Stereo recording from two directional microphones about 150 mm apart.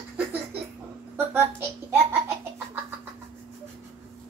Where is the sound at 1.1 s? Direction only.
15° right (ahead or behind).